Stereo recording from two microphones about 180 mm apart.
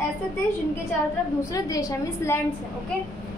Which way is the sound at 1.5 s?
20° left (ahead or behind).